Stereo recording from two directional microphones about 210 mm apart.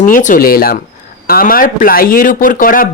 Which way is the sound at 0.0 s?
40° left (ahead or behind).